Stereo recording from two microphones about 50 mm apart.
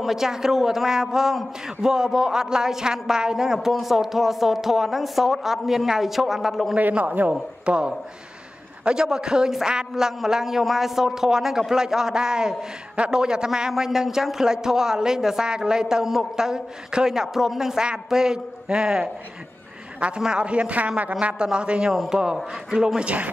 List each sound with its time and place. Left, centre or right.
0.0 s a man's voice: centre
6.8 s a man's voice: right
20.2 s a man's voice: centre